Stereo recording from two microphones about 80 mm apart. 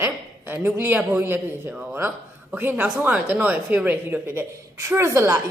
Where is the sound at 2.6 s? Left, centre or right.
Right.